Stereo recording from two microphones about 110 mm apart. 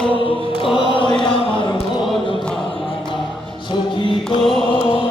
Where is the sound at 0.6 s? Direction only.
50° left (ahead or behind).